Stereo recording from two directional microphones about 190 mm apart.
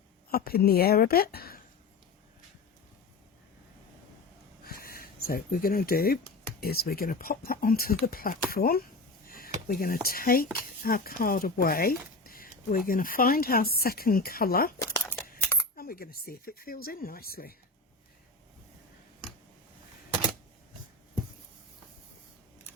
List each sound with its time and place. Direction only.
0.3 s speech: 50° left (ahead or behind)
4.6 s a sound: 50° left (ahead or behind)
6.6 s speech: 50° left (ahead or behind)
14.8 s crumpling: 10° left (ahead or behind)
15.7 s speech: 50° left (ahead or behind)